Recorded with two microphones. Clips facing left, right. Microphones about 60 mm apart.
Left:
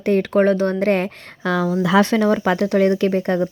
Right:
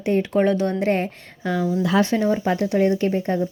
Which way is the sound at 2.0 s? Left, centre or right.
Left.